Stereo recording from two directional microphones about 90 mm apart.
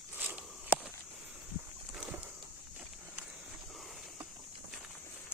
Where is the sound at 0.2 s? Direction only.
15° right (ahead or behind).